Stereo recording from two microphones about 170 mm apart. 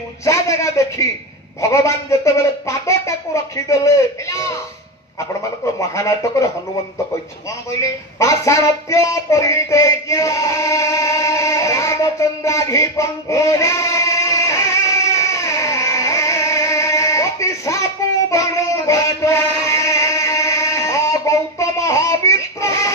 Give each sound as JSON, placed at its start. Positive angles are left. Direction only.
{"t": 0.2, "sound": "a man's voice", "side_deg": 15}
{"t": 5.8, "sound": "speech", "side_deg": 15}
{"t": 7.8, "sound": "a sound", "side_deg": 20}